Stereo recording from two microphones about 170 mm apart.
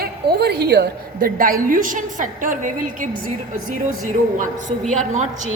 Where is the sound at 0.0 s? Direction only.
70° right (ahead or behind); by 3.1 s 50° right (ahead or behind).